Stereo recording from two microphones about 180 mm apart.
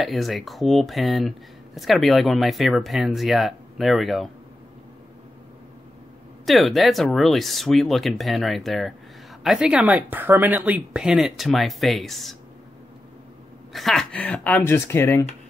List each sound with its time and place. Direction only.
0.0 s speech: centre (ahead or behind)
6.4 s speech: centre (ahead or behind)
13.7 s speech: centre (ahead or behind)